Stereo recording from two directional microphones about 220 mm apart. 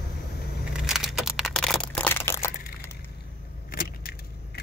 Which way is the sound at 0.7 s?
Centre (ahead or behind).